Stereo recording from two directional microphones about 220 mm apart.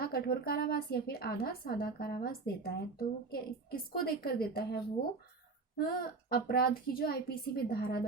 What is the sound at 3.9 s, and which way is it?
Speech, 45° left (ahead or behind).